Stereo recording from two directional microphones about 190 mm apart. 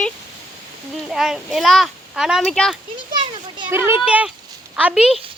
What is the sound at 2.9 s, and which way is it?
Children playing, 25° right (ahead or behind).